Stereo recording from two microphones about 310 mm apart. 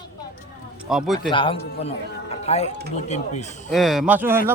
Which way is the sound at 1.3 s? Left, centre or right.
Centre.